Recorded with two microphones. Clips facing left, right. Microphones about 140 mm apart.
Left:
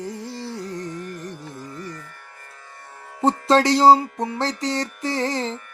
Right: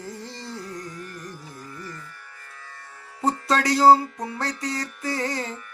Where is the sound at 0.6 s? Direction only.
25° left (ahead or behind).